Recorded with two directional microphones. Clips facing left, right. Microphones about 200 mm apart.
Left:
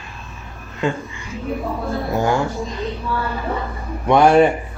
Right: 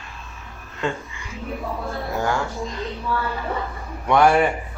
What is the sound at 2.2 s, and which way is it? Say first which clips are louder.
Speech: left 5 dB; 20° left (ahead or behind).